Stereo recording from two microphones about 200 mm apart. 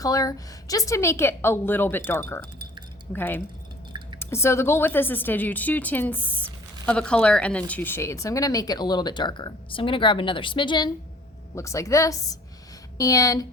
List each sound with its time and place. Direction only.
0.0 s a woman's voice: 15° left (ahead or behind)